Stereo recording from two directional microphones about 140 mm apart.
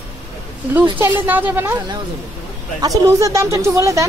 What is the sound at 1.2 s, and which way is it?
Speech, 15° right (ahead or behind).